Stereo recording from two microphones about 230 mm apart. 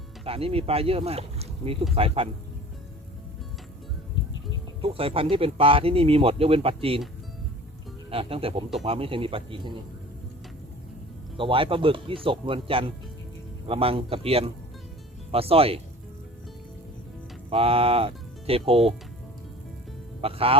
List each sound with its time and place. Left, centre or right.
0.3 s speech: right
4.8 s speech: right
8.1 s speech: right
11.3 s speech: right
17.5 s speech: right
20.2 s speech: right